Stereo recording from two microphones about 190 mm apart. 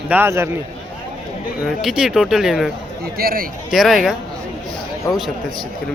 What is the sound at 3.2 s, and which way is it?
Speech, 50° right (ahead or behind).